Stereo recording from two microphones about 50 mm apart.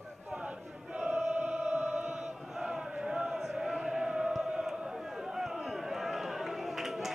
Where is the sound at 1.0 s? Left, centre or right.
Right.